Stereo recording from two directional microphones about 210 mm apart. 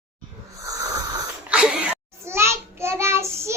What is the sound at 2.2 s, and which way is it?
Child singing, 10° right (ahead or behind).